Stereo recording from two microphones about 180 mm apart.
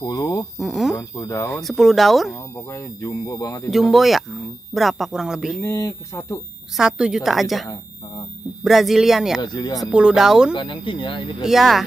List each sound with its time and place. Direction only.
0.0 s speech: 20° left (ahead or behind)
0.6 s speech: centre (ahead or behind)
0.9 s speech: 15° left (ahead or behind)
1.5 s speech: centre (ahead or behind)
2.5 s speech: 15° left (ahead or behind)
3.7 s speech: centre (ahead or behind)
5.6 s speech: 15° left (ahead or behind)
6.8 s speech: 5° right (ahead or behind)
9.4 s speech: 25° left (ahead or behind)
9.8 s speech: 5° right (ahead or behind)
10.5 s speech: 25° left (ahead or behind)
11.4 s speech: centre (ahead or behind)